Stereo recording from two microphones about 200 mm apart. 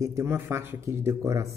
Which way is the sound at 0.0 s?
15° right (ahead or behind).